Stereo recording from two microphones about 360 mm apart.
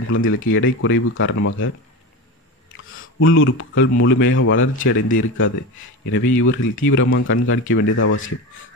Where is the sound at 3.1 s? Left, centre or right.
Left.